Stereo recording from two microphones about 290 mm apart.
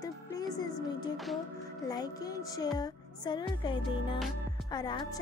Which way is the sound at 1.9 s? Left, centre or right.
Centre.